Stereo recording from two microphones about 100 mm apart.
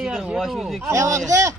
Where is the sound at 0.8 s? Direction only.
30° right (ahead or behind).